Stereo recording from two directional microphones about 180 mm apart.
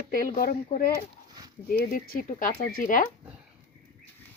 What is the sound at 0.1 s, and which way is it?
Speech, 50° left (ahead or behind).